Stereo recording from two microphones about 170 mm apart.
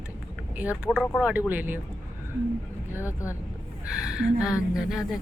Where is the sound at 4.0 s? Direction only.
5° right (ahead or behind).